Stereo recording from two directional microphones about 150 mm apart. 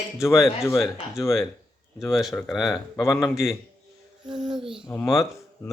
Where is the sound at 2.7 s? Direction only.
20° left (ahead or behind).